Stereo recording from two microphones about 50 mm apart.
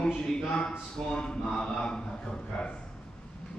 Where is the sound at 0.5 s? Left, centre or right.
Centre.